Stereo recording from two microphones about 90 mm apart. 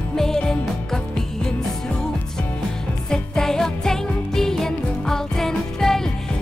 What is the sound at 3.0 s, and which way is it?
Music, 5° left (ahead or behind).